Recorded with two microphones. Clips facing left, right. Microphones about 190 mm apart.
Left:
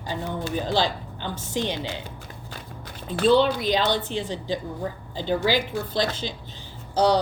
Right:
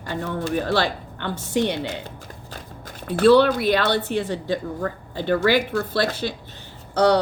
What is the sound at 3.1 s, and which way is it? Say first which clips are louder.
Speech: right 4 dB; 70° right (ahead or behind).